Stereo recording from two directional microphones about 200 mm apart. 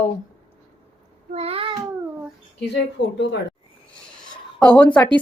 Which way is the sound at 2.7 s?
60° left (ahead or behind).